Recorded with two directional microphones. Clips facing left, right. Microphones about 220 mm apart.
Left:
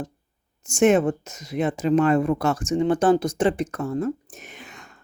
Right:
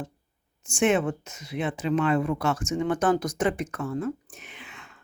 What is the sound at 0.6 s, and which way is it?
Speech, 40° left (ahead or behind).